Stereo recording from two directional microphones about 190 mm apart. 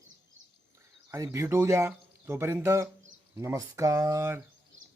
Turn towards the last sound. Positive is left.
turn(degrees=-15)  # may be behind; listen again after turning